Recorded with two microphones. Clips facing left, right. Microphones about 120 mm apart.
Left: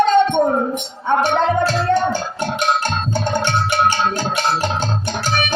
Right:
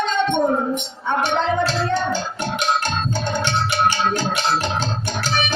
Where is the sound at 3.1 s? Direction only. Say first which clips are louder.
Left 5 dB; 50° left (ahead or behind).